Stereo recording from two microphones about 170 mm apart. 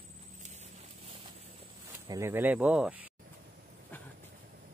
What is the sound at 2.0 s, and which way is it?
Speech, 20° right (ahead or behind).